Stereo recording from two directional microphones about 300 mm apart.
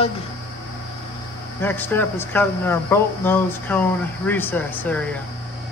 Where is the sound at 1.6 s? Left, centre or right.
Centre.